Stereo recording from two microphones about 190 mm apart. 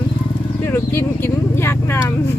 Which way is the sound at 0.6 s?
15° left (ahead or behind).